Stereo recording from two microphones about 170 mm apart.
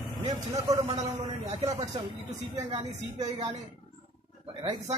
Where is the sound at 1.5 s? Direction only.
40° right (ahead or behind).